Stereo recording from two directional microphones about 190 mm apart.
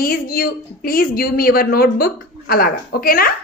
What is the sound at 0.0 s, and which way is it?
A woman's voice, 50° left (ahead or behind).